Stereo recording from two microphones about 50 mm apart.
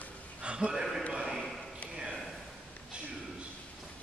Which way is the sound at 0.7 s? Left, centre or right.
Centre.